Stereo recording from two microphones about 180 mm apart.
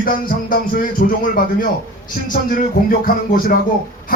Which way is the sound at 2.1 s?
50° left (ahead or behind).